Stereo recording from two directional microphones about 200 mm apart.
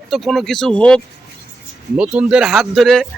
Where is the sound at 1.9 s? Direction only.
5° right (ahead or behind).